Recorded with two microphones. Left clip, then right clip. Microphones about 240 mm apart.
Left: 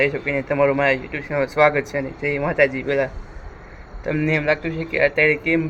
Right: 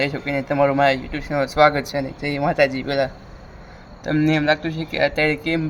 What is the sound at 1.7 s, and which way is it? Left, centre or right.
Speech, right.